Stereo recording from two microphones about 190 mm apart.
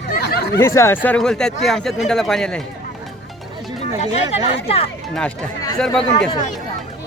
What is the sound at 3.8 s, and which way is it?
Speech, 35° left (ahead or behind).